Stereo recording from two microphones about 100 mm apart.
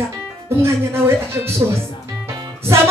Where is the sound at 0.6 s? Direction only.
25° right (ahead or behind).